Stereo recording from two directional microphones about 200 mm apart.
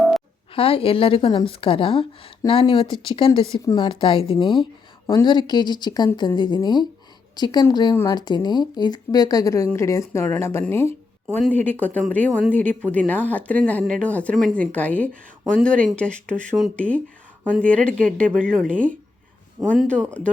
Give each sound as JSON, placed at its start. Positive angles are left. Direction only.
{"t": 0.5, "sound": "a woman's voice", "side_deg": 30}
{"t": 19.8, "sound": "speech", "side_deg": 5}